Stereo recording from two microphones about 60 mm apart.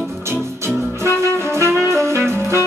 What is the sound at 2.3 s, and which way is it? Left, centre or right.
Music, right.